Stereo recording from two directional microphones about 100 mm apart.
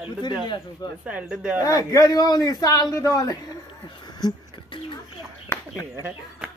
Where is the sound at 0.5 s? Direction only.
40° left (ahead or behind).